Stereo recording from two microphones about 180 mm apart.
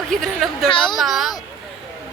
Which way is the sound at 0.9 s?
Centre (ahead or behind).